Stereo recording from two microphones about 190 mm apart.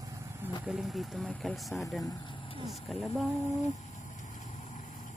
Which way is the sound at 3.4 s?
35° left (ahead or behind).